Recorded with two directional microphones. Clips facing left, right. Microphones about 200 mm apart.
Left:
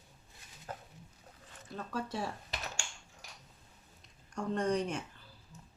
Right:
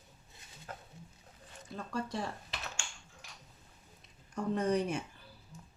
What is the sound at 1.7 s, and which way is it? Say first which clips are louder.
Speech: even; 5° left (ahead or behind).